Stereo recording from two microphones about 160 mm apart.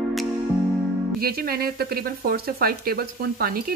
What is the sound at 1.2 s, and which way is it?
Speech, 70° right (ahead or behind).